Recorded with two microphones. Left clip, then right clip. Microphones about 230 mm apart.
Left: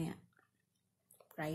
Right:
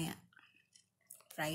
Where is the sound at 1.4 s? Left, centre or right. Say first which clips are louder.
Right 3 dB; centre.